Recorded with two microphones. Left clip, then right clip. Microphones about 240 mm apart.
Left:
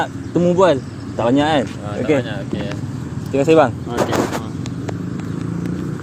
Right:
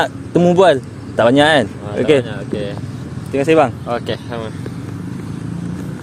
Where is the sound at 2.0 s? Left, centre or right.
Right.